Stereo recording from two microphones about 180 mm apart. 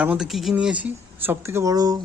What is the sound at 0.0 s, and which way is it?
Speech, 5° right (ahead or behind).